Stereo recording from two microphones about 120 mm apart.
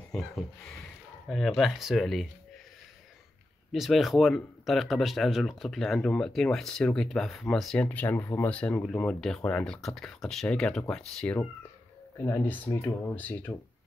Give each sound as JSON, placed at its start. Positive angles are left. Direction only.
{"t": 0.1, "sound": "speech", "side_deg": 5}
{"t": 3.7, "sound": "speech", "side_deg": 0}
{"t": 12.2, "sound": "speech", "side_deg": 20}